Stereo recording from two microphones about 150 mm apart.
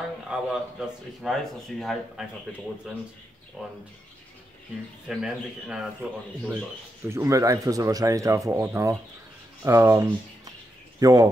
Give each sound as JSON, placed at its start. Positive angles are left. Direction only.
{"t": 0.3, "sound": "speech", "side_deg": -5}
{"t": 3.6, "sound": "speech", "side_deg": -5}
{"t": 5.0, "sound": "speech", "side_deg": -5}
{"t": 7.1, "sound": "speech", "side_deg": -20}